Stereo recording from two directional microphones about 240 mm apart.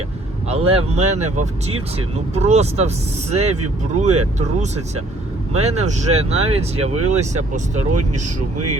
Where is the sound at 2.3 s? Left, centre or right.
Right.